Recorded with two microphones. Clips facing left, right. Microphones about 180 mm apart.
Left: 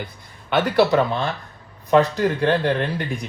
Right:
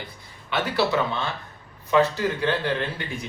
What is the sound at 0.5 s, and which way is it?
Speech, 50° left (ahead or behind).